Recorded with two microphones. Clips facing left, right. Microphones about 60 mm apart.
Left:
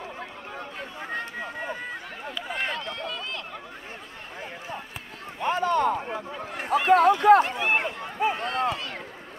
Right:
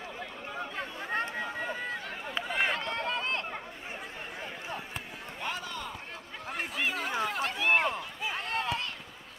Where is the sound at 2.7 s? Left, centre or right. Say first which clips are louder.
Right 1 dB; right.